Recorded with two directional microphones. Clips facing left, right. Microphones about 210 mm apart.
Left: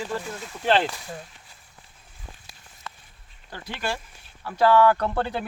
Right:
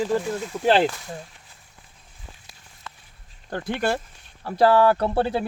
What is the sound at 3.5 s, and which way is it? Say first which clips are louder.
Speech: right 7 dB; 55° right (ahead or behind).